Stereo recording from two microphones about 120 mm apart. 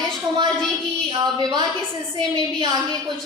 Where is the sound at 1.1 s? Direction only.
35° right (ahead or behind).